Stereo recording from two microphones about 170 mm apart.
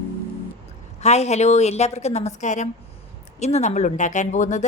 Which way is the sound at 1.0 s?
40° left (ahead or behind).